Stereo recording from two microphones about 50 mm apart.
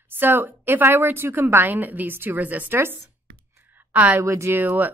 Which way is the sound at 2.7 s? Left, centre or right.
Right.